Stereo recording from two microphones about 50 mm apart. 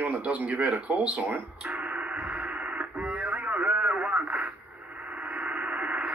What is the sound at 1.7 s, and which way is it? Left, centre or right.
Radio, right.